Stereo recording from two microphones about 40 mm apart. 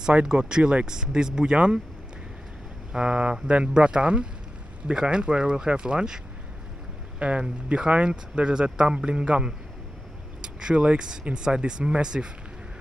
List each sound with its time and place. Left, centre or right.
0.1 s speech: right
2.9 s speech: right
7.2 s speech: right